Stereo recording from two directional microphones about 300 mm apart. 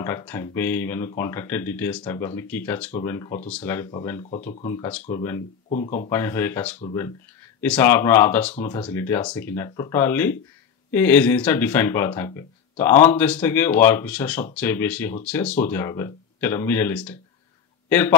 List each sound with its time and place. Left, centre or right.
0.0 s speech: centre
4.3 s speech: left
5.7 s speech: left
6.0 s a man's voice: centre